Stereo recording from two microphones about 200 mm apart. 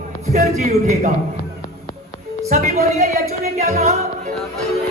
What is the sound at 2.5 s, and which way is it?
A woman's voice, 35° right (ahead or behind).